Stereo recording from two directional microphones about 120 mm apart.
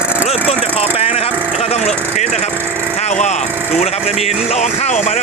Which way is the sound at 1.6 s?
65° left (ahead or behind).